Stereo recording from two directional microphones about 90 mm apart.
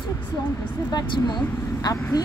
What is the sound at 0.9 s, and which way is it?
Speech, 55° left (ahead or behind).